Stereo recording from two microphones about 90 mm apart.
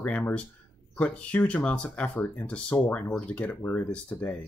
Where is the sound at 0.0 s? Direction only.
15° left (ahead or behind).